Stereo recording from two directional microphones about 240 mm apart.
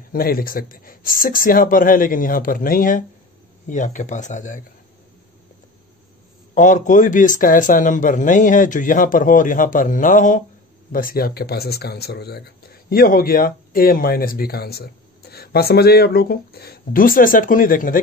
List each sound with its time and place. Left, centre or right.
0.1 s speech: left
6.5 s speech: left